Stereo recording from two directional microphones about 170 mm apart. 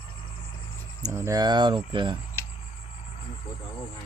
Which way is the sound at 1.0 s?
15° right (ahead or behind).